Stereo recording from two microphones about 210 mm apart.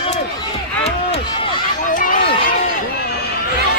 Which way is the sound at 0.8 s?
30° left (ahead or behind).